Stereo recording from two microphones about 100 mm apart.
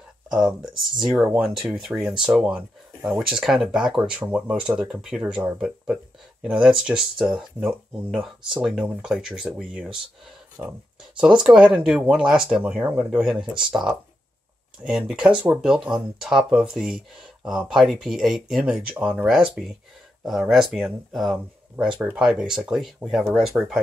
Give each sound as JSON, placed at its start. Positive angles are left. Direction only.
{"t": 0.3, "sound": "speech", "side_deg": -5}
{"t": 10.6, "sound": "speech", "side_deg": -20}
{"t": 11.1, "sound": "speech", "side_deg": -10}